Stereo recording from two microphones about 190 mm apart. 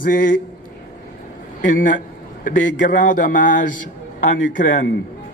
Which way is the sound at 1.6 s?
45° left (ahead or behind).